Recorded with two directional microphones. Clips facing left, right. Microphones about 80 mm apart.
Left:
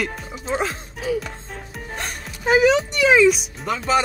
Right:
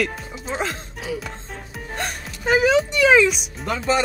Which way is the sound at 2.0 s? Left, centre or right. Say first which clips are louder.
Right 3 dB; centre.